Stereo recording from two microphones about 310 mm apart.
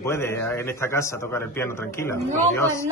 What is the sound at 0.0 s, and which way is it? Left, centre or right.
A man's voice, centre.